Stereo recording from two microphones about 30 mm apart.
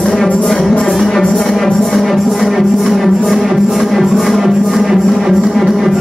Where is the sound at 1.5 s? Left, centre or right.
Centre.